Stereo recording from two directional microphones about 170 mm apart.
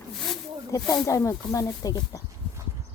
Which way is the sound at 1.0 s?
20° left (ahead or behind).